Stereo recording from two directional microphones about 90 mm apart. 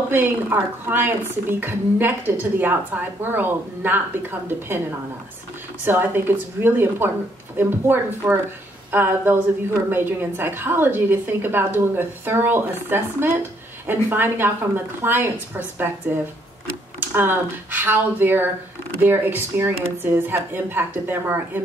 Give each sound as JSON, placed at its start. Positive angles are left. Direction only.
{"t": 0.1, "sound": "speech", "side_deg": -25}
{"t": 5.9, "sound": "speech", "side_deg": -25}